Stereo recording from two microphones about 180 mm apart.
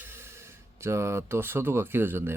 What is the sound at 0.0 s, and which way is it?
Speech, 10° right (ahead or behind).